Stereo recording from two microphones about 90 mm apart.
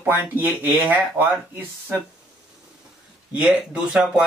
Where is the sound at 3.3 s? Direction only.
10° right (ahead or behind).